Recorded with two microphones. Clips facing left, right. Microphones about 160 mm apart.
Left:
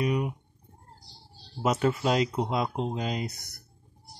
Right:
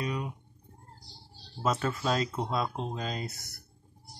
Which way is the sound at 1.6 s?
20° left (ahead or behind).